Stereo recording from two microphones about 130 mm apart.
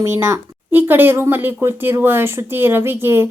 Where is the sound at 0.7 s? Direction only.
15° right (ahead or behind).